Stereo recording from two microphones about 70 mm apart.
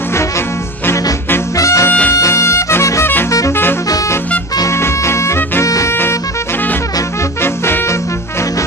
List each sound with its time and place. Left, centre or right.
1.6 s music: left
1.9 s music: left
2.1 s music: left
4.6 s music: left
7.4 s music: left